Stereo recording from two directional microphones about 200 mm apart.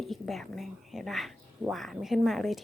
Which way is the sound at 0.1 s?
Centre (ahead or behind).